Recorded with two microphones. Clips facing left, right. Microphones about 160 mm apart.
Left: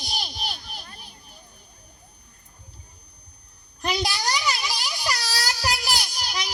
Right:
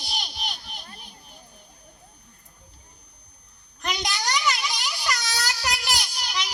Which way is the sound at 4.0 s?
35° left (ahead or behind).